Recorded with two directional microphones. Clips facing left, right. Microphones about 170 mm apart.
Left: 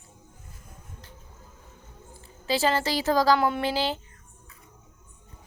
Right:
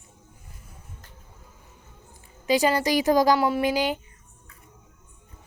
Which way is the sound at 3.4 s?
5° right (ahead or behind).